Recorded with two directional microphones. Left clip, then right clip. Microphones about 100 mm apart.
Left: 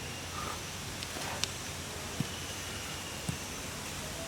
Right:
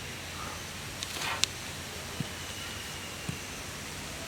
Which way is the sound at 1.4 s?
20° right (ahead or behind).